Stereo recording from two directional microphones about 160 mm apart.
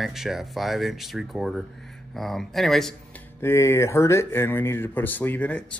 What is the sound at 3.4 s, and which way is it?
Speech, 15° left (ahead or behind).